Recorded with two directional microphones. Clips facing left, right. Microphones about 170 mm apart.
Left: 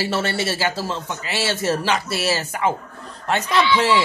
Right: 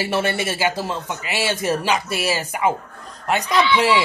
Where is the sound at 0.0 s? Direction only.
15° right (ahead or behind).